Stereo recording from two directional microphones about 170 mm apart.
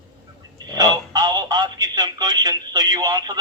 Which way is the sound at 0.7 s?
25° right (ahead or behind).